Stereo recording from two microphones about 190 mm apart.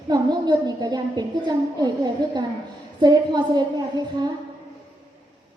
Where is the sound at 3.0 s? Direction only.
20° right (ahead or behind).